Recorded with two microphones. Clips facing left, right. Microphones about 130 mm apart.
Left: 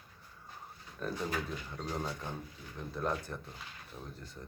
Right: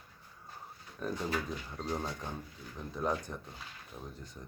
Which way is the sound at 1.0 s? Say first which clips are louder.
Right 1 dB; 15° right (ahead or behind).